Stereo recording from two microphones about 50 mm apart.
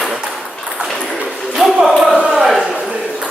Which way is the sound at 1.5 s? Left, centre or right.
Centre.